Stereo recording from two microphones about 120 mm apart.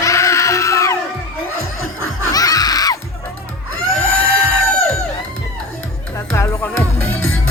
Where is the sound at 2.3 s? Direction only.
30° left (ahead or behind).